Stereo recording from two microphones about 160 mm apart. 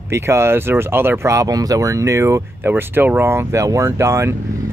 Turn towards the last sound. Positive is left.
turn(degrees=-15)  # may be behind; listen again after turning